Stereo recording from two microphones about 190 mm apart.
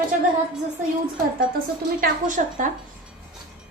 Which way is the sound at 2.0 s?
45° right (ahead or behind).